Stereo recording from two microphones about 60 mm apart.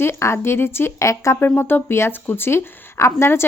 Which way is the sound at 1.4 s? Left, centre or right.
Left.